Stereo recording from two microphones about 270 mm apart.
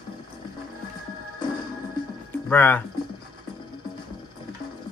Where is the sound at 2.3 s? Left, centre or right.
Centre.